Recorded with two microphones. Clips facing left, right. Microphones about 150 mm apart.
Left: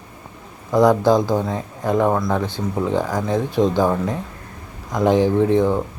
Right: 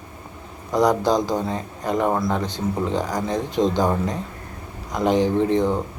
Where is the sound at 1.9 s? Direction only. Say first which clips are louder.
Left 3 dB; 10° right (ahead or behind).